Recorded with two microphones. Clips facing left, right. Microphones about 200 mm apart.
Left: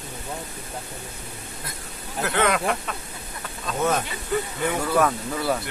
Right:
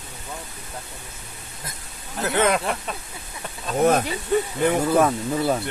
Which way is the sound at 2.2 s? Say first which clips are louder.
Right 2 dB; 20° right (ahead or behind).